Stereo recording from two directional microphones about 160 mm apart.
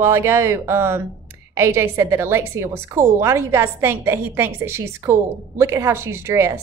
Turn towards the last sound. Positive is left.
turn(degrees=-15)  # may be behind; listen again after turning